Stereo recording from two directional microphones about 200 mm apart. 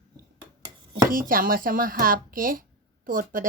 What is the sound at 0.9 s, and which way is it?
Speech, 45° right (ahead or behind).